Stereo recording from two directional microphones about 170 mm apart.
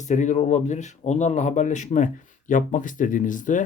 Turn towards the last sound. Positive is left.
turn(degrees=50)  # may be behind; listen again after turning